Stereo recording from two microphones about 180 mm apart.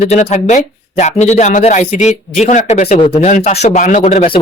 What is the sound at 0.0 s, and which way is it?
A man's voice, 40° left (ahead or behind).